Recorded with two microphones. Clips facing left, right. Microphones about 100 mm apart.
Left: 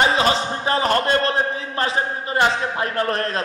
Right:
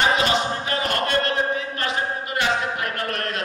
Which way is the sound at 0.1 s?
30° left (ahead or behind).